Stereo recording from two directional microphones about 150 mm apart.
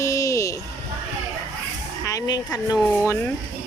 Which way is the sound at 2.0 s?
20° left (ahead or behind).